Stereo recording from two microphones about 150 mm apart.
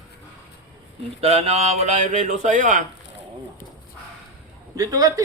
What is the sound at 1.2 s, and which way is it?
Speech, 45° right (ahead or behind).